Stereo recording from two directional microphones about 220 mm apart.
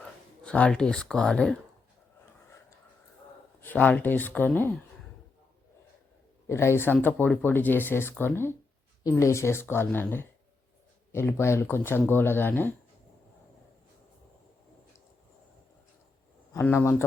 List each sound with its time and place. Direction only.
0.0 s speech: 5° left (ahead or behind)
3.6 s speech: 5° left (ahead or behind)
6.5 s speech: 10° left (ahead or behind)
16.5 s speech: 10° left (ahead or behind)